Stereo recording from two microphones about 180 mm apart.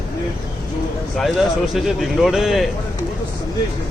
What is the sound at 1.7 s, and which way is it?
Speech, centre (ahead or behind).